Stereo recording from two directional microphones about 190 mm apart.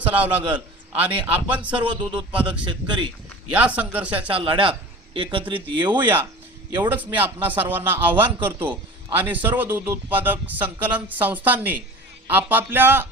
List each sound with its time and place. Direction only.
0.0 s speech: 10° right (ahead or behind)
1.8 s speech: 25° right (ahead or behind)
3.5 s speech: 10° right (ahead or behind)
4.3 s speech: 30° right (ahead or behind)
6.0 s speech: 10° right (ahead or behind)